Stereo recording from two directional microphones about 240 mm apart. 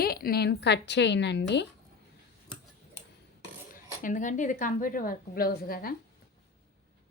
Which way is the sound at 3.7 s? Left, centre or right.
Left.